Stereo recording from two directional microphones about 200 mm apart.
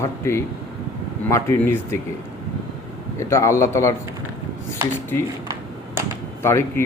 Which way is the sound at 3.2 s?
15° left (ahead or behind).